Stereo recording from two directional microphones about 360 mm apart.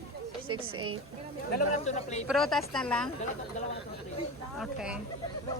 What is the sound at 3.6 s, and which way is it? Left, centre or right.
Speech, centre.